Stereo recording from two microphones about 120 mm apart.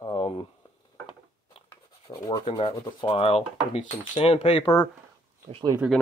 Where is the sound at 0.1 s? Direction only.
55° left (ahead or behind).